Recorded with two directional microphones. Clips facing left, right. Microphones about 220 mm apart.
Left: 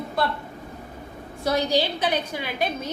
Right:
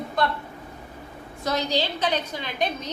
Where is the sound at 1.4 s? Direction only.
10° left (ahead or behind).